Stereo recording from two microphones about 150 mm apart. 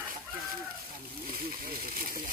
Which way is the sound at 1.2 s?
75° right (ahead or behind).